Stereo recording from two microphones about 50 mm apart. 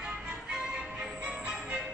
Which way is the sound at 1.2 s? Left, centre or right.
Right.